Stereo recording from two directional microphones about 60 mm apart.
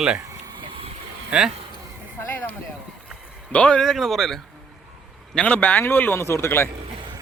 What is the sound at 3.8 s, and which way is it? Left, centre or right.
Speech, centre.